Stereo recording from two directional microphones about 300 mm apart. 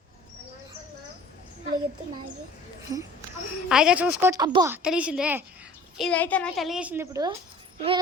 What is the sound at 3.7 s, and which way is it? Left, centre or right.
Speech, centre.